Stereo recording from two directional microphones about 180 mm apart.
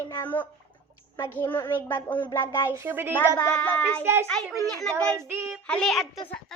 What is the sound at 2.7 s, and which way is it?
Child singing, 15° right (ahead or behind).